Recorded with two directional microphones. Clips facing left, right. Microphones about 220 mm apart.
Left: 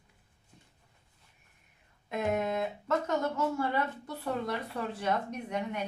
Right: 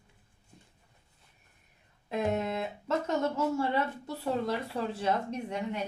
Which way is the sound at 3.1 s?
25° right (ahead or behind).